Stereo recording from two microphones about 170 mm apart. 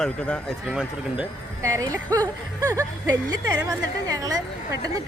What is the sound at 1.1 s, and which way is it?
Speech, 20° right (ahead or behind).